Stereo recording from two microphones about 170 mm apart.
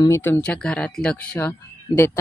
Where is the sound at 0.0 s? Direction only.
15° left (ahead or behind).